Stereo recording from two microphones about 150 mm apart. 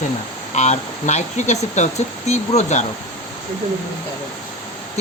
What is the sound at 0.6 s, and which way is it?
Speech, 50° left (ahead or behind).